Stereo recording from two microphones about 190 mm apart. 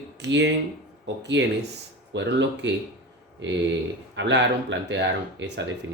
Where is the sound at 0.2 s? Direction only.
70° right (ahead or behind).